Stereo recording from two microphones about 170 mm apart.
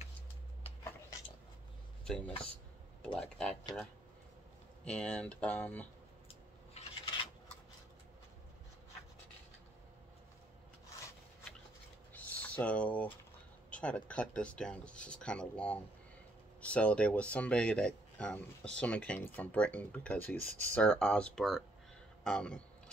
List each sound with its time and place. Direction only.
2.0 s speech: 5° left (ahead or behind)
4.8 s speech: 5° left (ahead or behind)
6.2 s coin: 35° left (ahead or behind)
12.1 s a sound: 10° left (ahead or behind)
13.7 s speech: 5° left (ahead or behind)